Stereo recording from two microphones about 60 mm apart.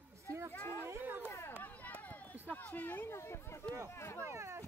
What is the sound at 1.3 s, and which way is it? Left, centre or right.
Run, left.